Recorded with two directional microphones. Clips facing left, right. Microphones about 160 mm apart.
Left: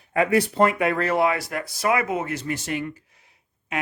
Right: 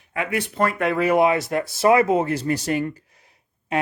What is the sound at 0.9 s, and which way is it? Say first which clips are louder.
Speech: right 4 dB; 15° right (ahead or behind).